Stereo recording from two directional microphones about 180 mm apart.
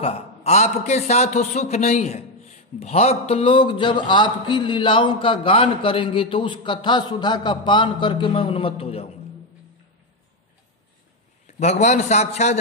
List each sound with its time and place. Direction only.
0.0 s a man's voice: 35° left (ahead or behind)
11.4 s a man's voice: 40° left (ahead or behind)